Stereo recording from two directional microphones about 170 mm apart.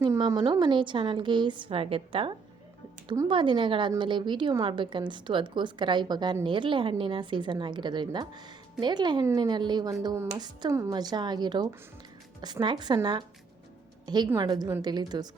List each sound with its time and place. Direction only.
0.2 s a woman's voice: 25° right (ahead or behind)
14.3 s a woman's voice: 25° right (ahead or behind)